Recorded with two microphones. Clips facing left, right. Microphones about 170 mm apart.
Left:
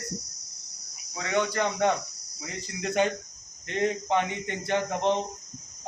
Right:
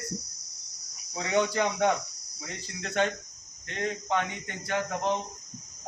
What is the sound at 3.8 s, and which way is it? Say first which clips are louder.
Speech: left 4 dB; 20° left (ahead or behind).